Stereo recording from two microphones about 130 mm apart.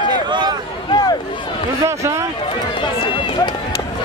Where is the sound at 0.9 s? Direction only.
30° left (ahead or behind).